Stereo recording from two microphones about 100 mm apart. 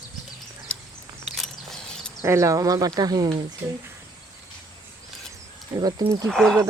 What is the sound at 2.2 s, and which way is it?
Speech, 30° right (ahead or behind).